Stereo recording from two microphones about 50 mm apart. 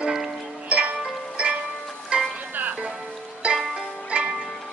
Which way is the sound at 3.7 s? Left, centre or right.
Centre.